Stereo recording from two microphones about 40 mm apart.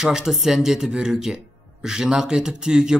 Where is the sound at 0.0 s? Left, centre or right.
Centre.